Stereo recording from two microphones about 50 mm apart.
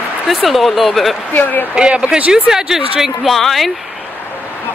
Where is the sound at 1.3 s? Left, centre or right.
Left.